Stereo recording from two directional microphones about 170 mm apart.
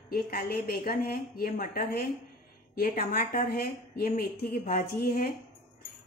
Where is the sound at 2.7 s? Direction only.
60° left (ahead or behind).